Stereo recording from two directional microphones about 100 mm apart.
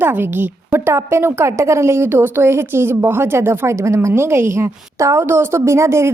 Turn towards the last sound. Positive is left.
turn(degrees=-30)  # may be behind; listen again after turning